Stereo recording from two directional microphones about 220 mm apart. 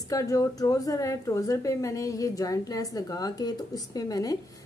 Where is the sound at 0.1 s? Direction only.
15° left (ahead or behind).